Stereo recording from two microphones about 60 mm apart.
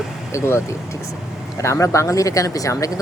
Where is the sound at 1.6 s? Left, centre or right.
Left.